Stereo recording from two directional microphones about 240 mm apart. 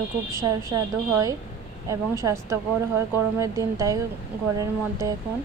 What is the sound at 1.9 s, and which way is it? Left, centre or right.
Speech, centre.